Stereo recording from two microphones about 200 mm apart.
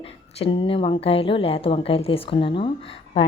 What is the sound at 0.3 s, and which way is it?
A woman's voice, 25° left (ahead or behind).